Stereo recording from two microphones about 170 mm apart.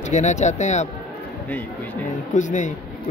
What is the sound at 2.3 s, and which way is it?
Speech, 45° left (ahead or behind).